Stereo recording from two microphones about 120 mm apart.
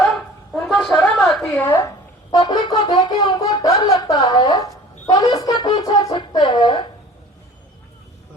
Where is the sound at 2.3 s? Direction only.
35° left (ahead or behind).